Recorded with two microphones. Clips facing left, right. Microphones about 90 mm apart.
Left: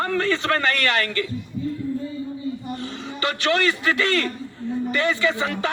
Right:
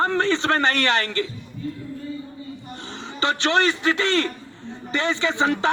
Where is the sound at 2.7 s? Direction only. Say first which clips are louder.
Left 4 dB; 25° right (ahead or behind).